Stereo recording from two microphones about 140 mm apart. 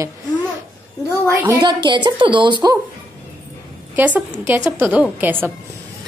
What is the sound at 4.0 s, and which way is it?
A woman's voice, 15° right (ahead or behind).